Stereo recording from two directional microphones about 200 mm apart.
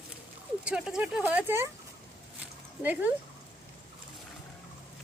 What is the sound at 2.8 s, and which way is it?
Speech, 10° right (ahead or behind).